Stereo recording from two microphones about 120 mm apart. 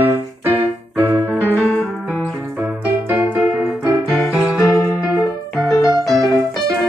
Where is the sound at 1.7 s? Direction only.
10° left (ahead or behind).